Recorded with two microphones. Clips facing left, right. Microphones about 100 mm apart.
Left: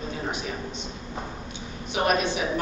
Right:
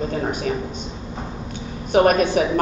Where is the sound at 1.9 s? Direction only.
45° right (ahead or behind).